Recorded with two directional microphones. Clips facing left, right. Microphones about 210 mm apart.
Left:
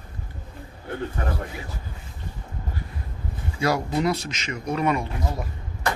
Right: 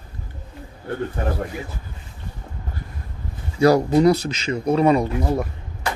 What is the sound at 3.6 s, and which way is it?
Speech, 35° right (ahead or behind).